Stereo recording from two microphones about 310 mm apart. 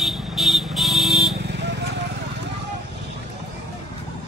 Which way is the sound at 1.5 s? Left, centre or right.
Right.